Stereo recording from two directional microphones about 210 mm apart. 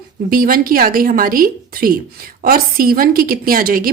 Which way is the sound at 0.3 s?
45° right (ahead or behind).